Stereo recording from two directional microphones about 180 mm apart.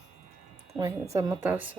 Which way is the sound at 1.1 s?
20° right (ahead or behind).